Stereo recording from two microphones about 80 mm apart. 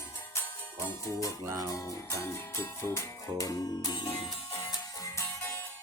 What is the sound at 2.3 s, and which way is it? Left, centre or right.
Speech, left.